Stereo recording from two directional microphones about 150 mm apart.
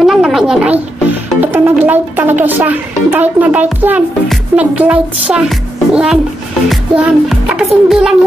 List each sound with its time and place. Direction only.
0.0 s a sound: centre (ahead or behind)
1.4 s speech: 10° right (ahead or behind)
6.7 s music: centre (ahead or behind)